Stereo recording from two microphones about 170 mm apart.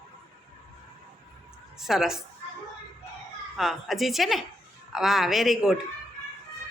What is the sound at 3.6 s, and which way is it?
Speech, centre (ahead or behind).